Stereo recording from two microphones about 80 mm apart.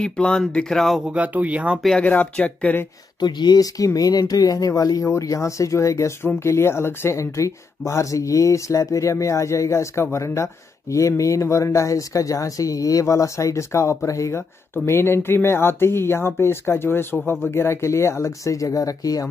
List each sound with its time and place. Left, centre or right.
0.0 s speech: centre
1.1 s speech: centre
2.0 s speech: centre
3.2 s speech: left
14.9 s speech: left